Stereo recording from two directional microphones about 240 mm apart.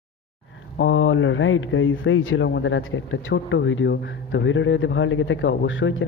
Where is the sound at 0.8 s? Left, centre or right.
Left.